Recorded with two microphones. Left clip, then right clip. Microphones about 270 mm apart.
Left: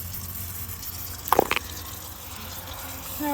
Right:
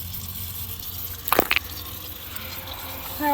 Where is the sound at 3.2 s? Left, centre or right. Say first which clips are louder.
Right 6 dB; centre.